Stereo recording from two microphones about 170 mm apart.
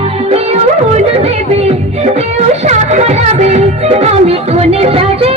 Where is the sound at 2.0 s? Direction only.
40° right (ahead or behind).